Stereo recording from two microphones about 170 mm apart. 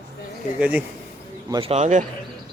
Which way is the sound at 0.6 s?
10° right (ahead or behind).